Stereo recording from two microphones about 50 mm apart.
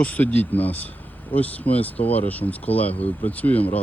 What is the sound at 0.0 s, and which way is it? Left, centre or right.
Speech, left.